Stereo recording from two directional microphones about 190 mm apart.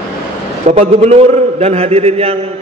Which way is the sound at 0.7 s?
35° right (ahead or behind).